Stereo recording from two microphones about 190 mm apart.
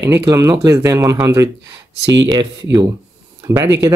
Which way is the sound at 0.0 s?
15° right (ahead or behind).